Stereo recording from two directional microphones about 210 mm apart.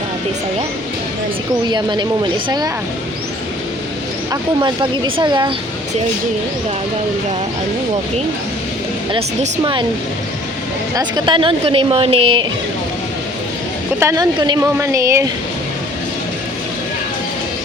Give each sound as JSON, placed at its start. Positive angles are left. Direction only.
{"t": 1.7, "sound": "a woman's voice", "side_deg": -20}
{"t": 4.3, "sound": "a woman's voice", "side_deg": -20}
{"t": 9.1, "sound": "a woman's voice", "side_deg": -25}
{"t": 10.9, "sound": "a woman's voice", "side_deg": -20}
{"t": 14.0, "sound": "a woman's voice", "side_deg": -15}